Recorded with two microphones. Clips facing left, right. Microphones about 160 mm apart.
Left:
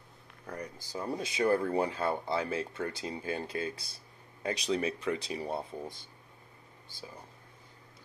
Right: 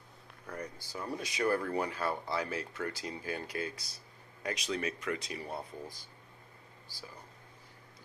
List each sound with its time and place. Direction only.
0.9 s speech: 25° left (ahead or behind)